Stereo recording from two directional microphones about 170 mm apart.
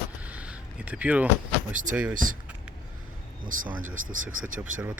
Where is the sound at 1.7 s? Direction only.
50° right (ahead or behind).